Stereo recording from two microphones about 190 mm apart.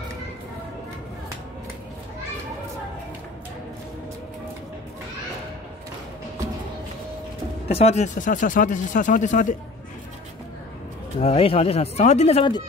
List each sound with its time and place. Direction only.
7.6 s speech: 35° left (ahead or behind)
11.1 s speech: 30° left (ahead or behind)